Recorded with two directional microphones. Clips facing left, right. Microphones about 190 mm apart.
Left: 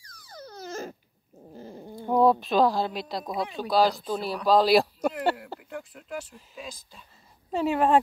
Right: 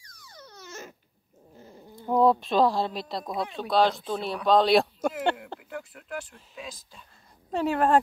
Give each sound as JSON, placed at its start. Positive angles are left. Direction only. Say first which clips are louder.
{"t": 0.0, "sound": "a sound", "louder": "left 6 dB", "side_deg": 35}
{"t": 1.5, "sound": "dog", "louder": "left 7 dB", "side_deg": 30}
{"t": 2.0, "sound": "speech", "louder": "even", "side_deg": 0}